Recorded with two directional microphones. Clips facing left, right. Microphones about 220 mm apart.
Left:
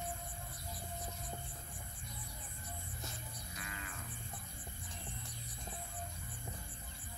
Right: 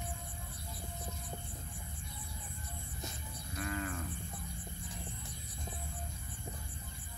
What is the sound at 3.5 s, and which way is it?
Moo, 50° right (ahead or behind).